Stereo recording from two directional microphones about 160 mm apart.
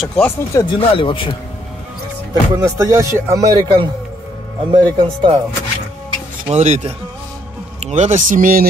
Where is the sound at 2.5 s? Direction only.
20° right (ahead or behind).